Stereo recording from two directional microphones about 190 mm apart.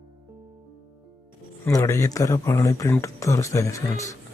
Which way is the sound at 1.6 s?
15° left (ahead or behind).